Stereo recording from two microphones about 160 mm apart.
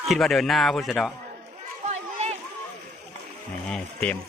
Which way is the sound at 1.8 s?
45° right (ahead or behind).